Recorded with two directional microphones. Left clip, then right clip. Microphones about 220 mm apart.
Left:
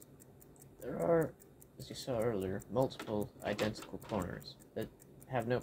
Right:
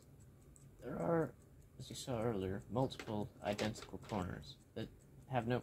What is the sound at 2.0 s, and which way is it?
Speech, 20° right (ahead or behind).